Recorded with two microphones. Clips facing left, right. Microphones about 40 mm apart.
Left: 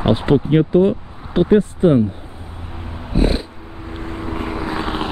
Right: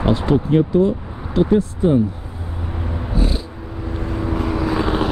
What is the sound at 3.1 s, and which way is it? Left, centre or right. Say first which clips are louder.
Cat: left 5 dB; left.